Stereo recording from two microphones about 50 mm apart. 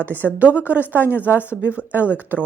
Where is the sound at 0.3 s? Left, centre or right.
Right.